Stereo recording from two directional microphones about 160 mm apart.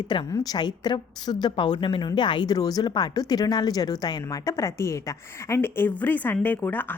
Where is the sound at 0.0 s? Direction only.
30° left (ahead or behind).